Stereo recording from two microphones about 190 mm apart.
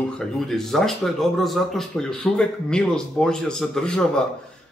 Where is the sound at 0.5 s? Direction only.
Centre (ahead or behind).